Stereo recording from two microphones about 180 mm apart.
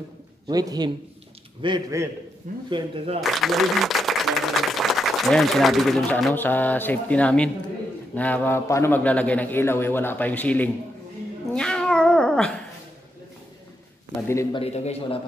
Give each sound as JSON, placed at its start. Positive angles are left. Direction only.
{"t": 0.5, "sound": "a man's voice", "side_deg": -20}
{"t": 2.4, "sound": "speech", "side_deg": -45}
{"t": 3.2, "sound": "a man's voice", "side_deg": 0}
{"t": 11.5, "sound": "cat", "side_deg": 5}
{"t": 14.2, "sound": "a man's voice", "side_deg": 15}
{"t": 14.6, "sound": "a man's voice", "side_deg": 35}